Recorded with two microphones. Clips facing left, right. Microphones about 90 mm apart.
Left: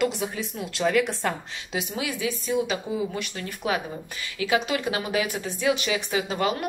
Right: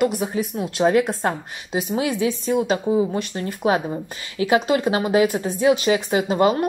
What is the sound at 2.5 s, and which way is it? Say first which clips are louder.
Speech: right 4 dB; 50° right (ahead or behind).